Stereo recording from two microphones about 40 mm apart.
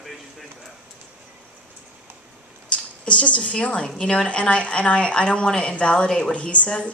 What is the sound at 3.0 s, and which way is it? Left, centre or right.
A woman's voice, left.